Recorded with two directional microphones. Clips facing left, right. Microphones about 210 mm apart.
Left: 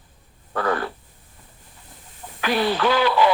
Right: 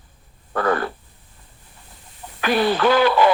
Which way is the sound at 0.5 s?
50° right (ahead or behind).